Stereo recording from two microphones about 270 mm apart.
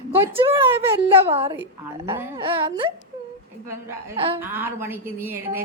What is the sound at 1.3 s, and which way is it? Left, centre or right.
A woman's voice, right.